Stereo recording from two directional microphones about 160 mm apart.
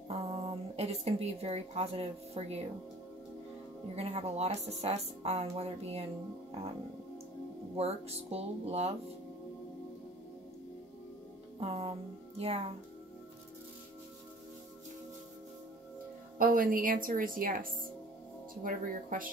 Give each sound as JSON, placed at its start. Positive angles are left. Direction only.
{"t": 0.1, "sound": "speech", "side_deg": -35}
{"t": 3.9, "sound": "a woman's voice", "side_deg": -40}
{"t": 7.7, "sound": "a woman's voice", "side_deg": -40}
{"t": 11.6, "sound": "a woman's voice", "side_deg": -35}
{"t": 16.3, "sound": "a woman's voice", "side_deg": -60}